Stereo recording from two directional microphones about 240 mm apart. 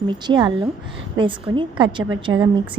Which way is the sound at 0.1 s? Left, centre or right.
Centre.